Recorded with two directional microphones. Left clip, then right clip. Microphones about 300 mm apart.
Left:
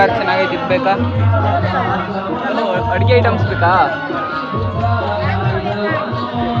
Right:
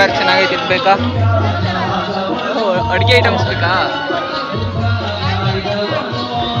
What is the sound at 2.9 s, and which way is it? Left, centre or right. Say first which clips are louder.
Speech: right 2 dB; centre.